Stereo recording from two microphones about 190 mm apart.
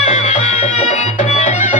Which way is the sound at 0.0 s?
35° left (ahead or behind).